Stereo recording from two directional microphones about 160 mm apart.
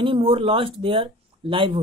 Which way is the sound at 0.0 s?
35° right (ahead or behind).